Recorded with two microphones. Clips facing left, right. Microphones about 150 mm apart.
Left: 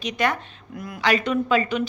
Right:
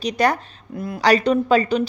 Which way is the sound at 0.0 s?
35° right (ahead or behind).